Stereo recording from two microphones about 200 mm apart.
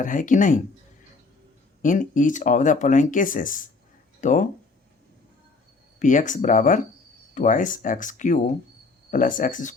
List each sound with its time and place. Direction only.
0.0 s speech: 40° left (ahead or behind)
1.8 s speech: 40° left (ahead or behind)
6.0 s speech: 40° left (ahead or behind)